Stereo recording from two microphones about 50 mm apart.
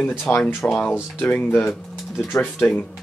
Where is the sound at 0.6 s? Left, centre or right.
Left.